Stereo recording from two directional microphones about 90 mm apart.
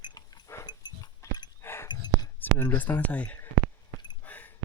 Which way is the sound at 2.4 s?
20° left (ahead or behind).